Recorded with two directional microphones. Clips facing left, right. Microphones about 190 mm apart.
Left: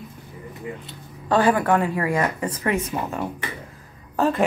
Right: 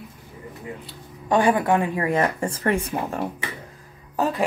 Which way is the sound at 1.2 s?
15° right (ahead or behind).